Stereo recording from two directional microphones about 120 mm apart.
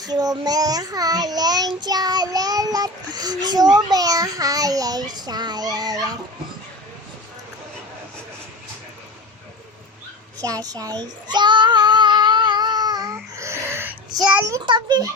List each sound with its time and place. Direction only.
0.0 s a child's voice: 30° right (ahead or behind)
10.4 s child singing: 30° right (ahead or behind)
14.3 s a child's voice: 20° right (ahead or behind)
14.6 s a child's voice: 40° right (ahead or behind)